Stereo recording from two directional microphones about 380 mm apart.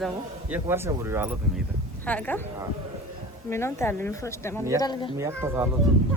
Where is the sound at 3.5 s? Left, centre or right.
Centre.